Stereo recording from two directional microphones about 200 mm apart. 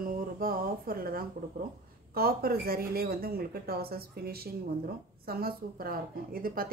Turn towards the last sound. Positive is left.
turn(degrees=-45)  # may be behind; listen again after turning